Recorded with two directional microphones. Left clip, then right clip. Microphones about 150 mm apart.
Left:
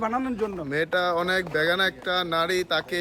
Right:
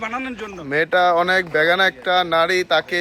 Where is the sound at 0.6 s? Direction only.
10° right (ahead or behind).